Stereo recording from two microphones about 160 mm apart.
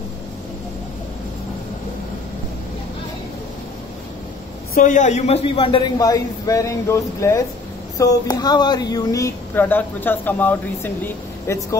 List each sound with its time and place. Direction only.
4.7 s a man's voice: 50° left (ahead or behind); by 5.9 s 35° left (ahead or behind)
5.9 s speech: 25° left (ahead or behind)